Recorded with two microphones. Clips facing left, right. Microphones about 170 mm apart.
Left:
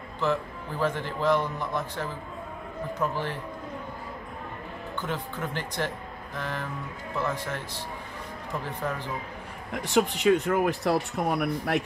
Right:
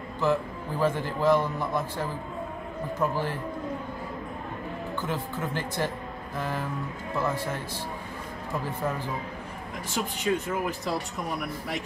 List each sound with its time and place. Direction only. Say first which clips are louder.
0.2 s speech: right 2 dB; 10° right (ahead or behind)
5.0 s speech: even; 10° right (ahead or behind)
9.8 s speech: left 7 dB; 65° left (ahead or behind)